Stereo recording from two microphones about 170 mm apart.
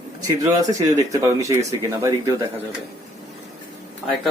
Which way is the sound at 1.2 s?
20° right (ahead or behind).